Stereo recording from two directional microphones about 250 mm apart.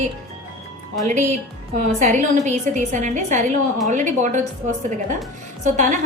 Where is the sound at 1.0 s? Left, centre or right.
Right.